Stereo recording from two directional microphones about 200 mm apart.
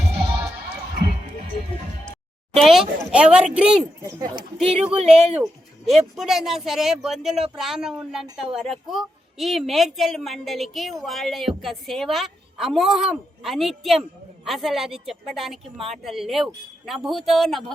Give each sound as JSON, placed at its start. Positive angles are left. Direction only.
{"t": 2.6, "sound": "a woman's voice", "side_deg": 0}
{"t": 4.0, "sound": "speech", "side_deg": -20}
{"t": 4.8, "sound": "speech", "side_deg": -30}
{"t": 5.4, "sound": "a woman's voice", "side_deg": 0}